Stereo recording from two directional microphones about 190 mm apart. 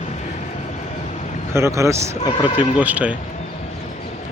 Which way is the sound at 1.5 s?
15° right (ahead or behind).